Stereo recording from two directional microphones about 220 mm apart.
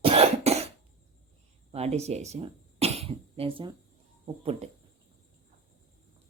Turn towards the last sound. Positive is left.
turn(degrees=-25)  # may be behind; listen again after turning